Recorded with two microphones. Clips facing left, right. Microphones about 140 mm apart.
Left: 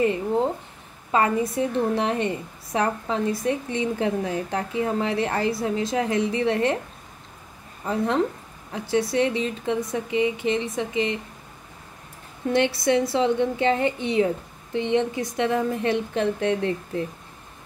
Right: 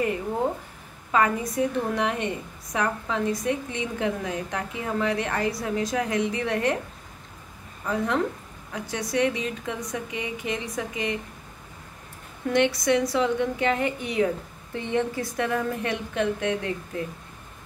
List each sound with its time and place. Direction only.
1.1 s a woman's voice: 30° left (ahead or behind)
7.8 s a woman's voice: 30° left (ahead or behind)
12.5 s a woman's voice: 30° left (ahead or behind)